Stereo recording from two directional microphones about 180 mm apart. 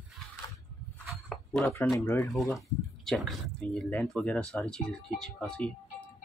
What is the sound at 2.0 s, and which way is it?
Speech, 15° left (ahead or behind).